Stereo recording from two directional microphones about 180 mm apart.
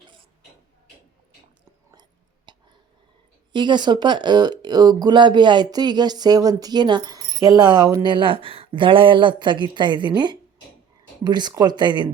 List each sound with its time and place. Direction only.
2.5 s whispering: 25° right (ahead or behind)
3.5 s speech: 25° right (ahead or behind)